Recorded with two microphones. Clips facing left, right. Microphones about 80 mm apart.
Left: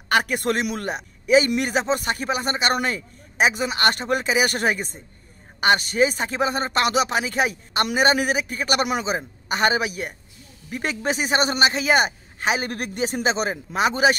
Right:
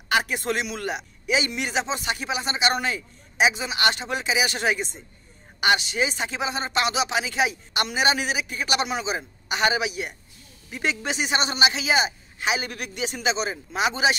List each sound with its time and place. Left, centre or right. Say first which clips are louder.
0.1 s speech: left 3 dB; left